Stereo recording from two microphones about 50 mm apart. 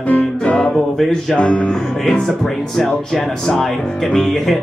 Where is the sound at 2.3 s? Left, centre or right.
Centre.